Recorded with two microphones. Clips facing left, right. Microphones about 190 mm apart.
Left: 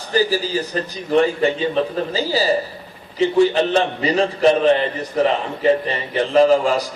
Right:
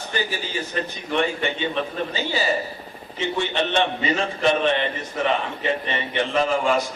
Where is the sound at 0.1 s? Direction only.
35° left (ahead or behind).